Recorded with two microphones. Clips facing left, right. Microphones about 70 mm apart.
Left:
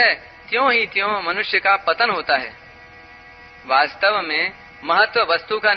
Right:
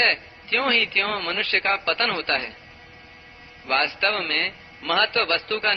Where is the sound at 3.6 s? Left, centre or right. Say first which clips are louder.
Left 7 dB; left.